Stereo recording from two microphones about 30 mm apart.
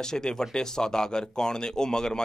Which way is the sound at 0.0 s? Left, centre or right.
Left.